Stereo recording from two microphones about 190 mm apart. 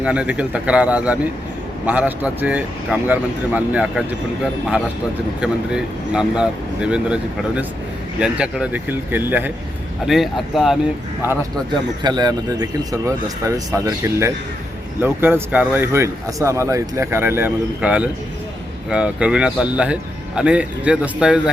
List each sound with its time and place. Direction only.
0.0 s speech: 5° right (ahead or behind)
5.4 s speech: 5° right (ahead or behind)
11.7 s speech: 20° right (ahead or behind); by 21.5 s 5° right (ahead or behind)